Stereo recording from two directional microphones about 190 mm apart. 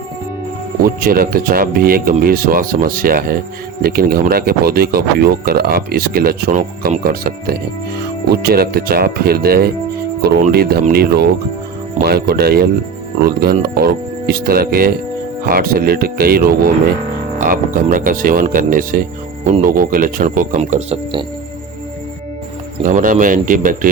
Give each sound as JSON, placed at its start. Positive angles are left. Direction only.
{"t": 0.8, "sound": "speech", "side_deg": -50}
{"t": 22.8, "sound": "speech", "side_deg": -45}